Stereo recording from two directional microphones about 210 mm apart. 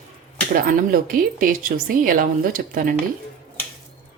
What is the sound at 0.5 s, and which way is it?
Speech, 40° right (ahead or behind).